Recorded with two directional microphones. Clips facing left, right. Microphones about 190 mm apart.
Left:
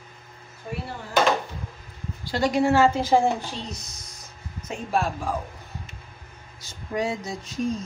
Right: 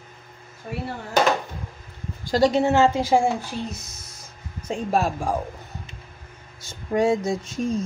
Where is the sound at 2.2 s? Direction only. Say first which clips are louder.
Right 6 dB; 40° right (ahead or behind).